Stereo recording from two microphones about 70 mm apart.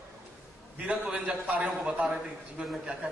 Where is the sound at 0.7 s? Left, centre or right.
Centre.